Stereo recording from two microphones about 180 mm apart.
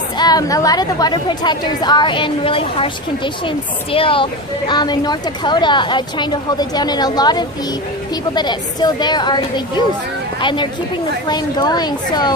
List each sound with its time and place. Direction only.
0.2 s a woman's voice: 20° left (ahead or behind)